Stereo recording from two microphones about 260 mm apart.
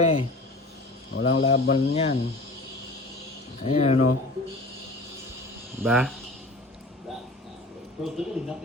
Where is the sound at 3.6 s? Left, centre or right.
Left.